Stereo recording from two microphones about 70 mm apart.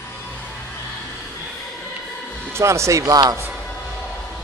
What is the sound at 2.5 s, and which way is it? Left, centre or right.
Speech, right.